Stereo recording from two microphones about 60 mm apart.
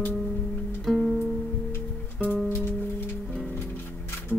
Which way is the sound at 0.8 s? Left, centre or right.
Centre.